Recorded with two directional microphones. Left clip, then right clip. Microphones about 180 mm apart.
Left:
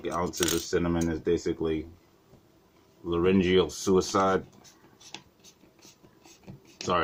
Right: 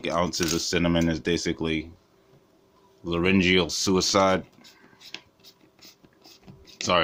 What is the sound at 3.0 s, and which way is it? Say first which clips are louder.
Speech: right 2 dB; 30° right (ahead or behind).